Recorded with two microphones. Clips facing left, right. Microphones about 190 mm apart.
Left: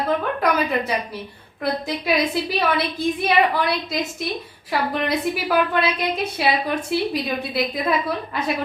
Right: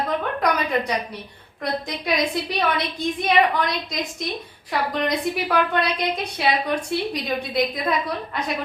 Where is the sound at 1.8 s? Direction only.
5° left (ahead or behind).